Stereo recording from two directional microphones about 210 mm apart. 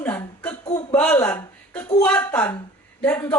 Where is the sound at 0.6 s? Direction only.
20° left (ahead or behind).